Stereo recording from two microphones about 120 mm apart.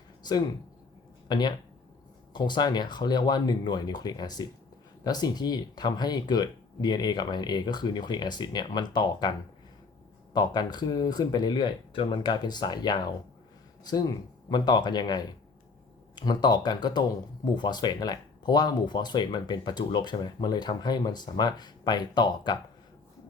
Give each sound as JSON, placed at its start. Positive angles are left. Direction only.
{"t": 0.2, "sound": "a sound", "side_deg": 35}
{"t": 1.3, "sound": "speech", "side_deg": 35}
{"t": 10.3, "sound": "speech", "side_deg": 35}